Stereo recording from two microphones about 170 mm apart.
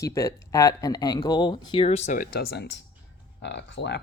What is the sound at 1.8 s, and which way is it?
Speech, 40° left (ahead or behind).